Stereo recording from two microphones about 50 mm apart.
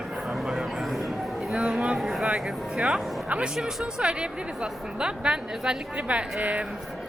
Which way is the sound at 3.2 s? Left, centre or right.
Right.